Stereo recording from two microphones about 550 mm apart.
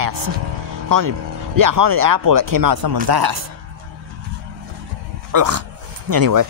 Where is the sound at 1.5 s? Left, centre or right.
Right.